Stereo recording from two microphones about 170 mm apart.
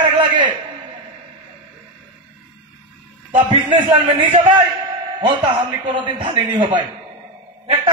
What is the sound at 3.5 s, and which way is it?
Speech, 30° right (ahead or behind).